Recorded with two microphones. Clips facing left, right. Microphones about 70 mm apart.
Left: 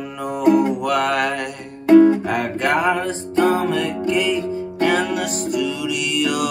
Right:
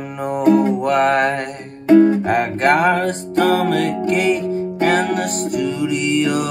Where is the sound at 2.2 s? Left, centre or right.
Right.